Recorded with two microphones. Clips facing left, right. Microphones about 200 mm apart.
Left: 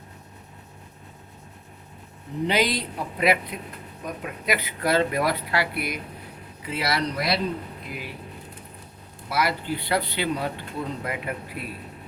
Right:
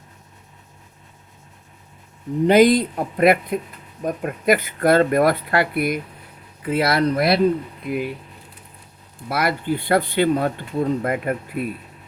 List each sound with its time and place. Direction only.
2.5 s speech: 50° right (ahead or behind)
9.3 s speech: 55° right (ahead or behind)